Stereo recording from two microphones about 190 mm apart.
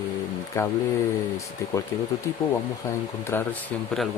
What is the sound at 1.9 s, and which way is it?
Speech, 15° left (ahead or behind).